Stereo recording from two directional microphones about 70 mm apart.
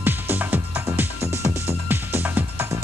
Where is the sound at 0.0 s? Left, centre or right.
Right.